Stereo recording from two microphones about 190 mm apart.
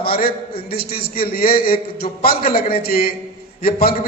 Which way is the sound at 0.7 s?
50° left (ahead or behind).